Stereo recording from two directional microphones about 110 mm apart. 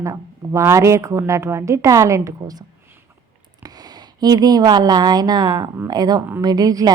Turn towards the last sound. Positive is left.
turn(degrees=-35)  # may be behind; listen again after turning